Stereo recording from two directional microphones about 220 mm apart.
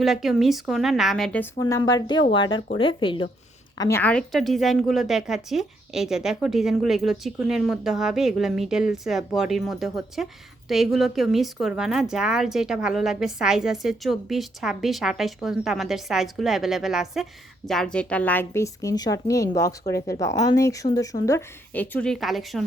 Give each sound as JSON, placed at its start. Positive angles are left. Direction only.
{"t": 0.0, "sound": "a woman's voice", "side_deg": 0}
{"t": 3.8, "sound": "a woman's voice", "side_deg": 10}